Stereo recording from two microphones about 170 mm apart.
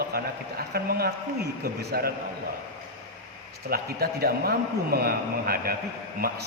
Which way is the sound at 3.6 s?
65° right (ahead or behind).